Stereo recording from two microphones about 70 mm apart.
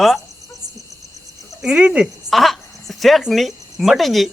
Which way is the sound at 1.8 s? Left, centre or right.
Right.